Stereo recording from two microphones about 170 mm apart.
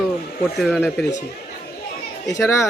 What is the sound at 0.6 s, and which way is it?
Speech, centre (ahead or behind).